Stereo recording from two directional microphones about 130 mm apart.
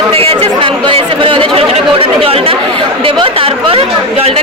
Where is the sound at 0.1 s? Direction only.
45° right (ahead or behind).